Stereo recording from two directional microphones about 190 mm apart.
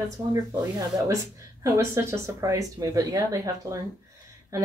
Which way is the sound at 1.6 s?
15° right (ahead or behind).